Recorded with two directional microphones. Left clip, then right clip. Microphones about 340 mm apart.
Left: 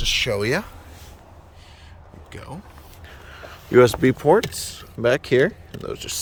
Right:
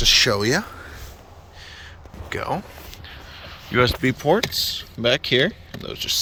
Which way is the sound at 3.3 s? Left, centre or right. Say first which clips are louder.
Left 5 dB; centre.